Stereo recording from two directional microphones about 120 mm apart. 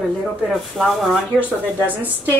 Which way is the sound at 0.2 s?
Centre (ahead or behind).